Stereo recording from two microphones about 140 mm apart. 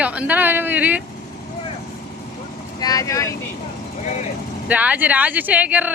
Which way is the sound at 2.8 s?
25° left (ahead or behind).